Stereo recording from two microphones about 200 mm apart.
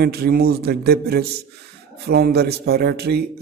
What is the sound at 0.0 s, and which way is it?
Speech, 50° right (ahead or behind).